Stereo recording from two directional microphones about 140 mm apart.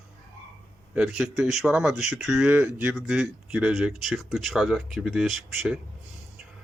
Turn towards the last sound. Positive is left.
turn(degrees=0)  # may be behind; listen again after turning